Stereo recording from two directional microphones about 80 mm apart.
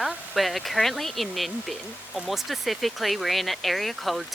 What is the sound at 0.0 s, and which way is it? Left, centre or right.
Speech, centre.